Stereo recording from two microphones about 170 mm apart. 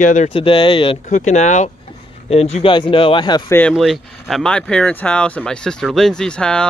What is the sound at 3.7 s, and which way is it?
Speech, centre (ahead or behind).